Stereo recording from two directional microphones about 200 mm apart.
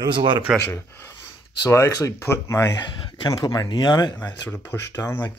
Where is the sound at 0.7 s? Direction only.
10° left (ahead or behind).